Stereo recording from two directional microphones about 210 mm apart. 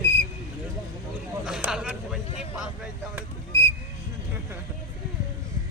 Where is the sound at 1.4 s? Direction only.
Centre (ahead or behind).